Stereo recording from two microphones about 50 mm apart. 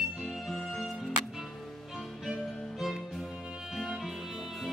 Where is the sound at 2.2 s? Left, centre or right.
Centre.